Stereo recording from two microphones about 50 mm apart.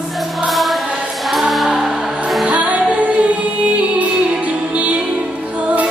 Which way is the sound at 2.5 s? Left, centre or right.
Right.